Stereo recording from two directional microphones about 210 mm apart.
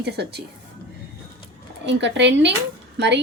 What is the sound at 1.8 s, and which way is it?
Speech, 55° right (ahead or behind).